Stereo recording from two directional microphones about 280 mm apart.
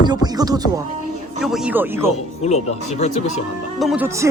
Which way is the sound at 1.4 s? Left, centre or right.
Centre.